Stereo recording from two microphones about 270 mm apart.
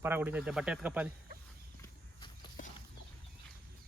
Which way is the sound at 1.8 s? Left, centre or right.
Centre.